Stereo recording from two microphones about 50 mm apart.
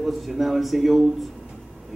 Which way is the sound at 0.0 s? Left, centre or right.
Centre.